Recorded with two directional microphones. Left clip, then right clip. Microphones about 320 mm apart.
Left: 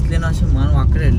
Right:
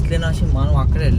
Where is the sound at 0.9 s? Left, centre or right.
Centre.